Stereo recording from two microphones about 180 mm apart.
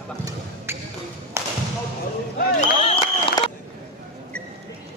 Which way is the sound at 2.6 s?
35° left (ahead or behind).